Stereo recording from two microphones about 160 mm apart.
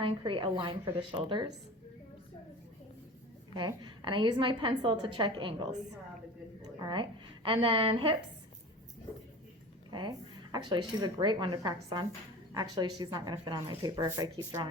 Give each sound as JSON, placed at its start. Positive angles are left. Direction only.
{"t": 0.0, "sound": "a woman's voice", "side_deg": -35}
{"t": 3.5, "sound": "a woman's voice", "side_deg": -30}
{"t": 6.7, "sound": "a woman's voice", "side_deg": -30}
{"t": 9.9, "sound": "speech", "side_deg": -25}